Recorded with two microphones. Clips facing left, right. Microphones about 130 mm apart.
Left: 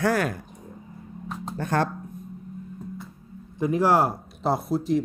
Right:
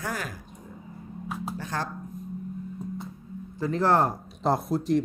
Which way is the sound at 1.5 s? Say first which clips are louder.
Left 11 dB; 60° left (ahead or behind).